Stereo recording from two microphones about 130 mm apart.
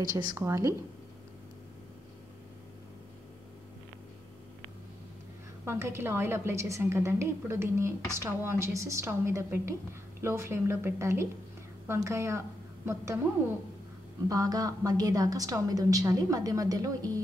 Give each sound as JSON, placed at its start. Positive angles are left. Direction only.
{"t": 0.4, "sound": "a woman's voice", "side_deg": -20}
{"t": 5.7, "sound": "a woman's voice", "side_deg": -20}
{"t": 14.3, "sound": "a woman's voice", "side_deg": -30}